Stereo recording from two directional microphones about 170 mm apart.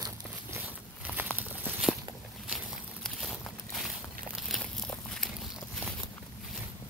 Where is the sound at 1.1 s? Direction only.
5° right (ahead or behind).